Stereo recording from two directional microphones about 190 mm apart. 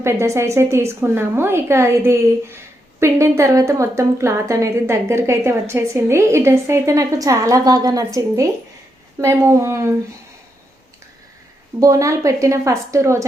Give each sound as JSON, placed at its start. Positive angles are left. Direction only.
{"t": 0.0, "sound": "a woman's voice", "side_deg": -15}
{"t": 11.8, "sound": "a woman's voice", "side_deg": -15}